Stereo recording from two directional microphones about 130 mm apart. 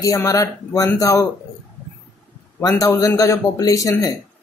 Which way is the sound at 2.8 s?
20° left (ahead or behind).